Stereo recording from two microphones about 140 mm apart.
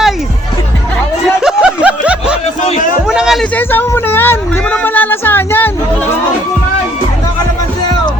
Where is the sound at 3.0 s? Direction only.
5° right (ahead or behind).